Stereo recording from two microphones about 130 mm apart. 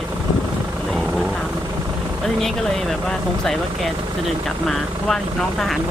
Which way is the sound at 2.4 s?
5° left (ahead or behind).